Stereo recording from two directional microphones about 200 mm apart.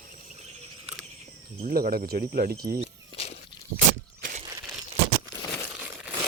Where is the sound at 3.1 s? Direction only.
30° left (ahead or behind).